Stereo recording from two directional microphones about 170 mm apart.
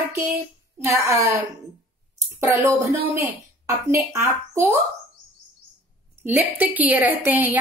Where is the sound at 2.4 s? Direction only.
20° right (ahead or behind).